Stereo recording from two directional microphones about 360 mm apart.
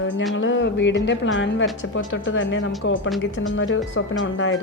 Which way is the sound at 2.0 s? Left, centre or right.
Left.